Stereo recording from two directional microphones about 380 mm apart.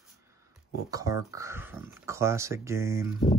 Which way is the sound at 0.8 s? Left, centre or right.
Centre.